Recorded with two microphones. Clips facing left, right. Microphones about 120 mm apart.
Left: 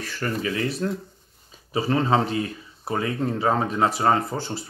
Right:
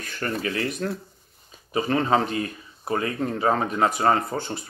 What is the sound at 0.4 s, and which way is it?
Speech, 40° right (ahead or behind).